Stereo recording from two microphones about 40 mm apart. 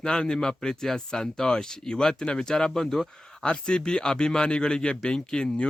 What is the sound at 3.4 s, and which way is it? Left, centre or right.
Speech, left.